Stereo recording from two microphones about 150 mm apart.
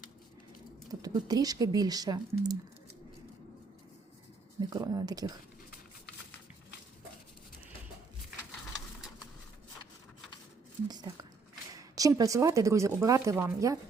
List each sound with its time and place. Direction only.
0.9 s speech: 25° right (ahead or behind)
4.7 s speech: 25° right (ahead or behind)
10.8 s a sound: 25° right (ahead or behind)
11.7 s speech: 25° right (ahead or behind)